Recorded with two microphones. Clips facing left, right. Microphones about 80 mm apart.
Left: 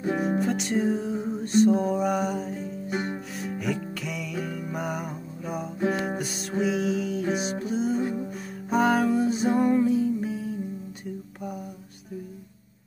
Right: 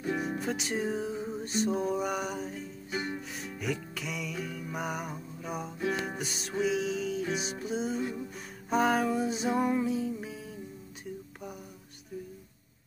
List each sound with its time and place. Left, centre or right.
0.4 s music: centre
8.0 s music: left
8.6 s music: centre